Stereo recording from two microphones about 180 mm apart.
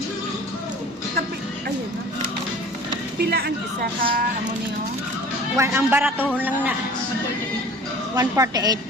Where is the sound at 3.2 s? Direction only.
60° right (ahead or behind).